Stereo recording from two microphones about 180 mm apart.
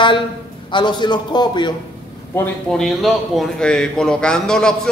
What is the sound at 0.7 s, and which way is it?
A man's voice, 25° left (ahead or behind).